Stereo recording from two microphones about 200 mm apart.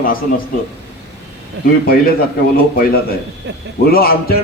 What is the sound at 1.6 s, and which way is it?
Speech, 60° right (ahead or behind).